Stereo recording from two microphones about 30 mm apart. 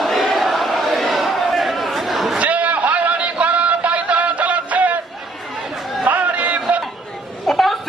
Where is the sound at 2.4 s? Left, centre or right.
Right.